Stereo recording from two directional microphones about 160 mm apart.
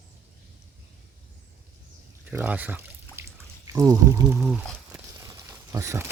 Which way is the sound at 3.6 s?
20° right (ahead or behind).